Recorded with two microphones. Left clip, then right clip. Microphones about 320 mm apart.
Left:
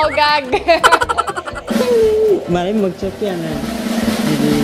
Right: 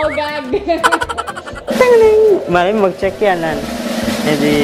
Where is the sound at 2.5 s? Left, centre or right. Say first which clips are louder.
Right 5 dB; right.